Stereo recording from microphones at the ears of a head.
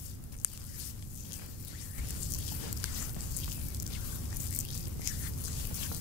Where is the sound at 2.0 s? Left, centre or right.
Left.